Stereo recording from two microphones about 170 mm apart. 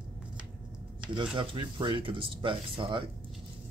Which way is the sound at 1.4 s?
30° right (ahead or behind).